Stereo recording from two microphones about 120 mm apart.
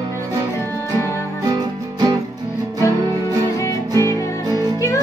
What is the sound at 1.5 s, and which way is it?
Music, 30° right (ahead or behind).